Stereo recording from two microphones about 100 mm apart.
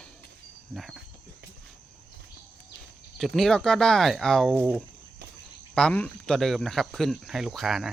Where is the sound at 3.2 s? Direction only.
Centre (ahead or behind).